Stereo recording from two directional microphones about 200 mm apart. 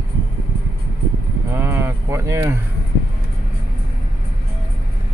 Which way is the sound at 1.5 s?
10° right (ahead or behind).